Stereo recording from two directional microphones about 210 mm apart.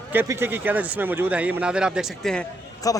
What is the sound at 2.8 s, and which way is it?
Speech, 15° left (ahead or behind).